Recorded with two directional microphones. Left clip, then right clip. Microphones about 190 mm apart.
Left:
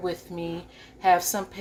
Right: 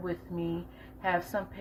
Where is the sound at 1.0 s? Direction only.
30° left (ahead or behind).